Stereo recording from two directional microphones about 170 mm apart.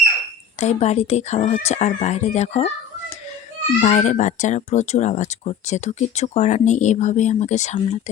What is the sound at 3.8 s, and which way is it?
Speech, 40° left (ahead or behind).